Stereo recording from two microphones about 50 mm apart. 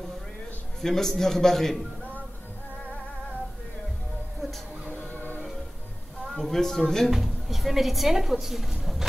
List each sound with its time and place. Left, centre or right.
0.7 s a man's voice: centre
4.9 s music: left
6.3 s a man's voice: centre
7.1 s a woman's voice: centre